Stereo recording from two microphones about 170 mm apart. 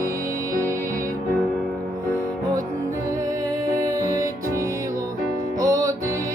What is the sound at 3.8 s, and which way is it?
Music, 20° right (ahead or behind).